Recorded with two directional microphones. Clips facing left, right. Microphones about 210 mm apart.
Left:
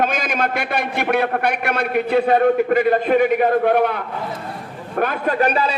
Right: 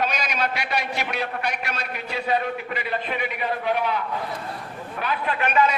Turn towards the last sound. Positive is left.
turn(degrees=35)  # may be behind; listen again after turning